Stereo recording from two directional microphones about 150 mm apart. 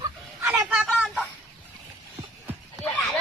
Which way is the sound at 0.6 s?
Centre (ahead or behind).